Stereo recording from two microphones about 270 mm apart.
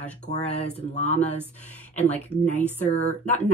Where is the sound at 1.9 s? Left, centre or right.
Centre.